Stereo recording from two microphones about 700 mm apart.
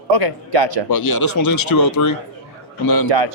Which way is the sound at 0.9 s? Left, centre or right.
Left.